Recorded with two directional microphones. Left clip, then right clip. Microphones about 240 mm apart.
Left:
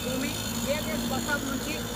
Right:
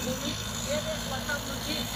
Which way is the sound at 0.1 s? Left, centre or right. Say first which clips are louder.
Left 2 dB; left.